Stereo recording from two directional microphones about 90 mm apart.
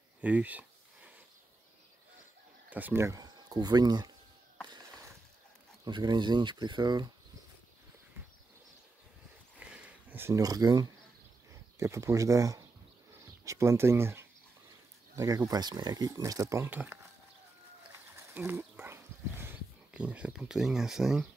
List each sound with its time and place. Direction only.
0.2 s a sound: 15° right (ahead or behind)
2.7 s speech: 25° right (ahead or behind)
3.2 s speech: 45° right (ahead or behind)
5.9 s speech: 60° right (ahead or behind)
9.6 s a sound: 15° right (ahead or behind)
10.3 s speech: 40° right (ahead or behind)
11.8 s speech: 35° right (ahead or behind)
15.1 s speech: 40° right (ahead or behind)
16.7 s speech: 20° right (ahead or behind)
18.3 s dog: 25° right (ahead or behind)
19.9 s speech: 15° right (ahead or behind)